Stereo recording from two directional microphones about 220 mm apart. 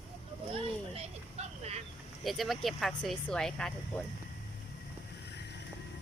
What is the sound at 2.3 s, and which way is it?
Speech, centre (ahead or behind).